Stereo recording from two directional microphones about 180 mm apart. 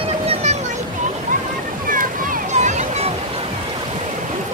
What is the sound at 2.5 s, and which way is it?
Music, 40° right (ahead or behind).